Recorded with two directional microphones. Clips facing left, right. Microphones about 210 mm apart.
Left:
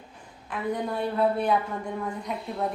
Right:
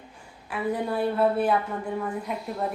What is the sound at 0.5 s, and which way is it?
A woman's voice, 5° right (ahead or behind).